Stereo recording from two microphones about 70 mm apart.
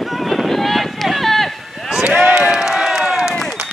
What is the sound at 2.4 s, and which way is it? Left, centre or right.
Run, centre.